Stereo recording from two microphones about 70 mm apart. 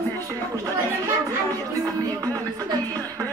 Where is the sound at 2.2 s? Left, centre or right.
Right.